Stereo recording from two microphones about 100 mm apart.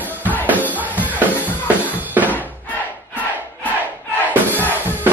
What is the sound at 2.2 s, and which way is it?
Crowd, 20° right (ahead or behind).